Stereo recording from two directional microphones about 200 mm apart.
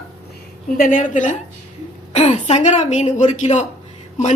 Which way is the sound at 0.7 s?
45° left (ahead or behind).